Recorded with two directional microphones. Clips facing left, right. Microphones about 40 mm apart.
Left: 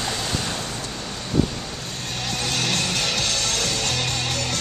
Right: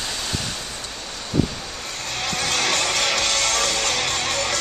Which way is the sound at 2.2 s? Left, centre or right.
Right.